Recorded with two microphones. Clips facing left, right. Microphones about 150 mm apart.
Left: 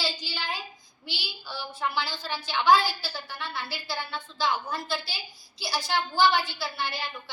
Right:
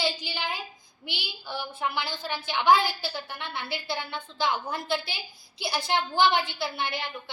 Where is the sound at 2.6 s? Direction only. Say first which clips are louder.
Even; 55° right (ahead or behind).